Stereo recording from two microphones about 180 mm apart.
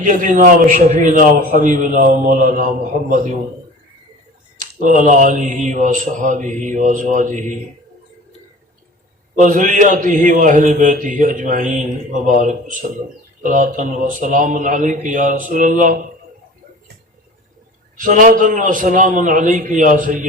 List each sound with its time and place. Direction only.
0.0 s a man's voice: 45° right (ahead or behind)
4.6 s a man's voice: 50° right (ahead or behind)
9.3 s a man's voice: 45° right (ahead or behind)
17.9 s a man's voice: 45° right (ahead or behind)